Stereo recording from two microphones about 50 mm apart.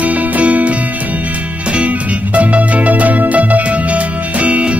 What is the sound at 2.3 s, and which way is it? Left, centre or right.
Music, right.